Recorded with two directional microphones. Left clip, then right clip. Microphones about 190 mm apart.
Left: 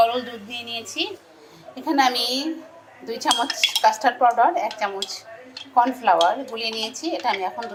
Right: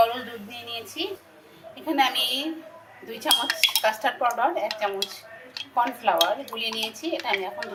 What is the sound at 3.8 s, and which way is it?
Speech, 25° left (ahead or behind).